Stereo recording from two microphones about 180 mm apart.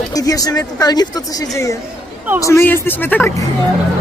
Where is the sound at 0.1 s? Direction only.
20° left (ahead or behind).